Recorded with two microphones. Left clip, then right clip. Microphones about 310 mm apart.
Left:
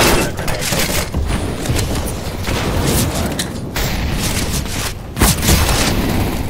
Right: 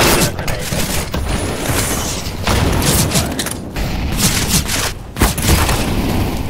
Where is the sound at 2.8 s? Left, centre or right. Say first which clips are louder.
Right 2 dB; centre.